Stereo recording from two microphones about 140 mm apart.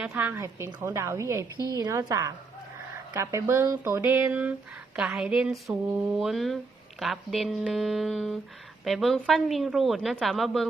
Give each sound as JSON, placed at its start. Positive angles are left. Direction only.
{"t": 0.0, "sound": "a woman's voice", "side_deg": -10}
{"t": 1.5, "sound": "a woman's voice", "side_deg": 25}
{"t": 1.8, "sound": "a woman's voice", "side_deg": -25}